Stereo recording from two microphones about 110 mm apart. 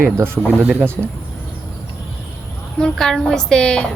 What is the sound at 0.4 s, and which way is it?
Speech, 15° right (ahead or behind).